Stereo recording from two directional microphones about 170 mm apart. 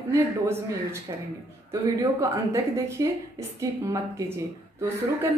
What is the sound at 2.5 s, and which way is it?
A woman's voice, 15° right (ahead or behind).